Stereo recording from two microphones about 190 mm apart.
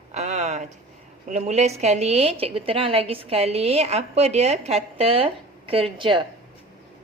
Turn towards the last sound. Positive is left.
turn(degrees=-25)  # may be behind; listen again after turning